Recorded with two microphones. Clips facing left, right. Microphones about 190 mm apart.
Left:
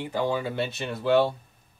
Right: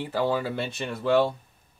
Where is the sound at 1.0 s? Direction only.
Centre (ahead or behind).